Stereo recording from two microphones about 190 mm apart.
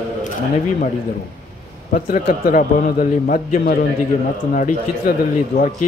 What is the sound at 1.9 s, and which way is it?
A man's voice, 45° left (ahead or behind).